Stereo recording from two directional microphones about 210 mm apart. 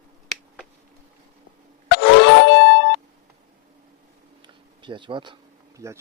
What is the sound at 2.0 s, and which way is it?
Music, 55° left (ahead or behind).